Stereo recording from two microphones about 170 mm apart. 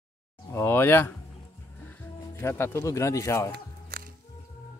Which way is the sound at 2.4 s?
15° left (ahead or behind).